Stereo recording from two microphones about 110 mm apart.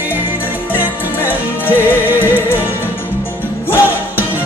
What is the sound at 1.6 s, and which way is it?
Music, 20° left (ahead or behind).